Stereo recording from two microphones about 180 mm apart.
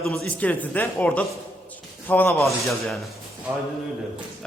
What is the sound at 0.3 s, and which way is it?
A man's voice, 10° left (ahead or behind).